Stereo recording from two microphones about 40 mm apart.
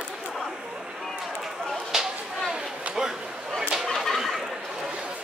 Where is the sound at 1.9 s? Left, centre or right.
Centre.